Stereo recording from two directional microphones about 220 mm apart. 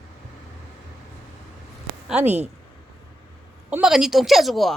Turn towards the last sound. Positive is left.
turn(degrees=0)  # may be behind; listen again after turning